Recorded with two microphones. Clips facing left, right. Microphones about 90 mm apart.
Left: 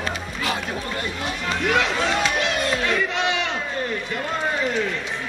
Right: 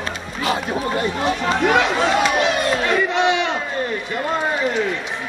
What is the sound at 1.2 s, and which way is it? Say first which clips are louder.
Speech: right 7 dB; 35° right (ahead or behind).